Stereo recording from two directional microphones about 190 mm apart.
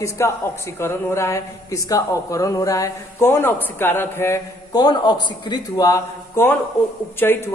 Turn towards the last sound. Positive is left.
turn(degrees=10)  # may be behind; listen again after turning